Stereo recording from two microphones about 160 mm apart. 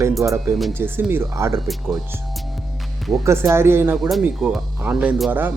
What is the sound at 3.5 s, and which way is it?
Speech, 15° right (ahead or behind).